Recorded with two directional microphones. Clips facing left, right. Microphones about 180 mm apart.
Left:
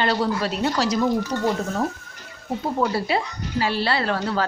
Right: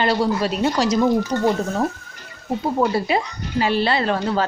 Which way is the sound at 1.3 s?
55° right (ahead or behind).